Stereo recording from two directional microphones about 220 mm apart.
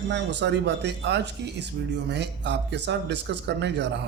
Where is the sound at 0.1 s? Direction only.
55° right (ahead or behind).